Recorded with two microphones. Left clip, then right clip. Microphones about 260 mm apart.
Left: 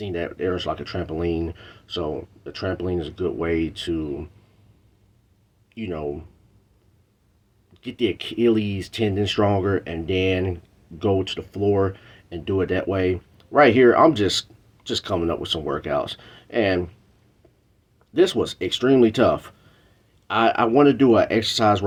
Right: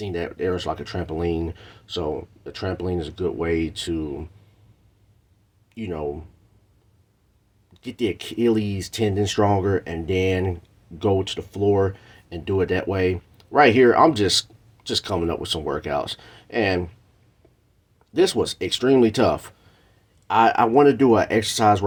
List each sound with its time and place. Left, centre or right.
0.0 s speech: right
5.7 s speech: right
7.7 s speech: right
18.1 s speech: right